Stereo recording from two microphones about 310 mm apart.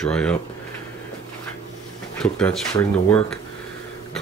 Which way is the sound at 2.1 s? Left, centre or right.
Centre.